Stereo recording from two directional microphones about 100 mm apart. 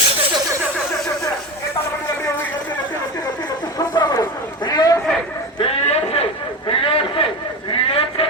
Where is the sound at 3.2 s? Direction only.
40° left (ahead or behind).